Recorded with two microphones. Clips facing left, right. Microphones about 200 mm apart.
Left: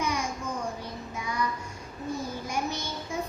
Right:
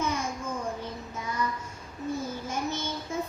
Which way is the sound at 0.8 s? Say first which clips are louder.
Even; 15° left (ahead or behind).